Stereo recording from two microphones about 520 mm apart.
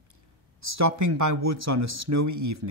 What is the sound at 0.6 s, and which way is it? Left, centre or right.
Speech, right.